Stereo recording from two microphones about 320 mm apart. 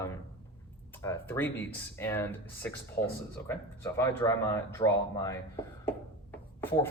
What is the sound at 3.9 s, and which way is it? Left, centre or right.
Speech, centre.